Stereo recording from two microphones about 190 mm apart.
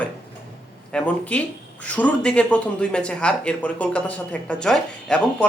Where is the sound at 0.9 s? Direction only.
5° left (ahead or behind).